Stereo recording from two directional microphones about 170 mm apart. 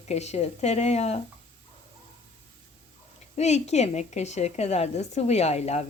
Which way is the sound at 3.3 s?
40° left (ahead or behind).